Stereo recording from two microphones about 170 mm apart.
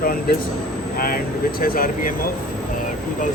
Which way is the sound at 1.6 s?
55° left (ahead or behind).